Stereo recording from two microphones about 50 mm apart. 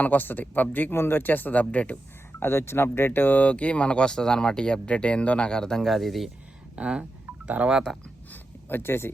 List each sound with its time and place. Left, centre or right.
0.0 s speech: left
0.9 s speech: left
2.4 s speech: left
3.3 s speech: left
5.8 s speech: centre
6.7 s speech: centre
7.9 s speech: centre
8.3 s a sound: left